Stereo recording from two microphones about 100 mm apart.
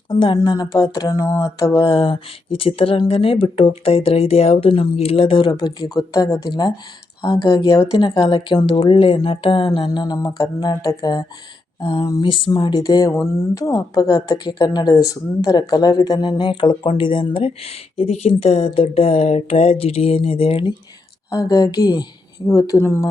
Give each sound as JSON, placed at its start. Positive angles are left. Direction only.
{"t": 0.1, "sound": "speech", "side_deg": 60}
{"t": 0.4, "sound": "speech", "side_deg": 40}
{"t": 1.8, "sound": "speech", "side_deg": 60}
{"t": 9.9, "sound": "speech", "side_deg": 45}
{"t": 11.8, "sound": "speech", "side_deg": 65}
{"t": 12.5, "sound": "speech", "side_deg": 50}
{"t": 16.4, "sound": "speech", "side_deg": 55}
{"t": 21.2, "sound": "speech", "side_deg": 35}